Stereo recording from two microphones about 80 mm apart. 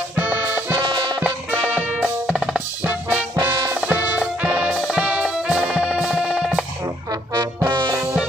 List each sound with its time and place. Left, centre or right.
0.2 s music: right
2.0 s music: centre
2.8 s music: right; by 6.6 s centre
7.6 s music: right